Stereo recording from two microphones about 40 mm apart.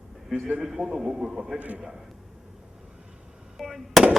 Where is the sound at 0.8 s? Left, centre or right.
Centre.